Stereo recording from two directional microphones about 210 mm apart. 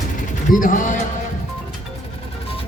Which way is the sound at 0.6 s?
40° left (ahead or behind).